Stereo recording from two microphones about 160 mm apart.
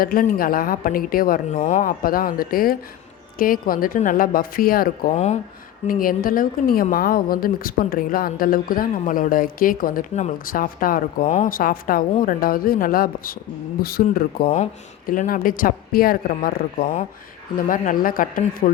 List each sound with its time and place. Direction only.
0.0 s a woman's voice: 60° left (ahead or behind)
1.5 s a woman's voice: 45° left (ahead or behind); by 5.1 s 65° left (ahead or behind)
5.1 s speech: 45° left (ahead or behind)
5.9 s a woman's voice: 60° left (ahead or behind)